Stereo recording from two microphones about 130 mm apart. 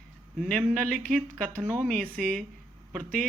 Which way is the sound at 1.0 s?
5° left (ahead or behind).